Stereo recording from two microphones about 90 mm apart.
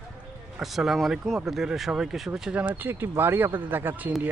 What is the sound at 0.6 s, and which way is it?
Speech, centre (ahead or behind).